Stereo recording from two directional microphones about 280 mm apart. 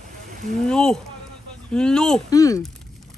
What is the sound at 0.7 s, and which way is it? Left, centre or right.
Speech, centre.